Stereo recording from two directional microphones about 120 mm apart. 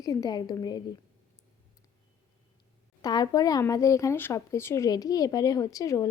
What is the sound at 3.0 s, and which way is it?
A woman's voice, 30° left (ahead or behind).